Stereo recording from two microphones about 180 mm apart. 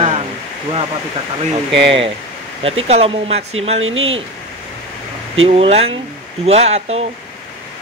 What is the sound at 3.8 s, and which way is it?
Speech, 90° right.